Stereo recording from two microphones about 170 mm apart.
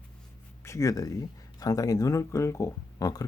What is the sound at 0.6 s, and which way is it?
Speech, 20° left (ahead or behind).